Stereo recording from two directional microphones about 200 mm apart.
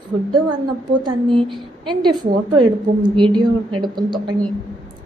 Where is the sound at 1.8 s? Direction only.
20° right (ahead or behind).